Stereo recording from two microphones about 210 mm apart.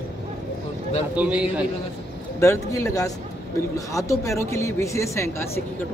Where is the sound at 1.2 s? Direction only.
5° right (ahead or behind).